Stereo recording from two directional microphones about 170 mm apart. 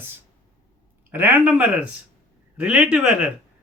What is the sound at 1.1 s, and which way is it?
A woman's voice, 10° right (ahead or behind).